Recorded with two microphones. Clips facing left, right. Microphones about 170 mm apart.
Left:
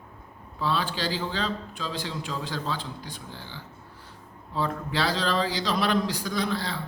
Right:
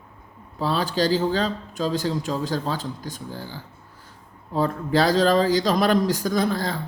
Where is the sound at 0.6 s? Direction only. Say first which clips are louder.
Right 5 dB; 40° right (ahead or behind).